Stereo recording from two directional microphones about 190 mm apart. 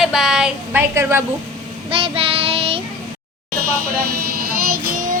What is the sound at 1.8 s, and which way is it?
Child singing, 30° right (ahead or behind).